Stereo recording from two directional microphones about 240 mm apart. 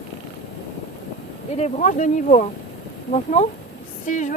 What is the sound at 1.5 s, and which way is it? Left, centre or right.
Speech, left.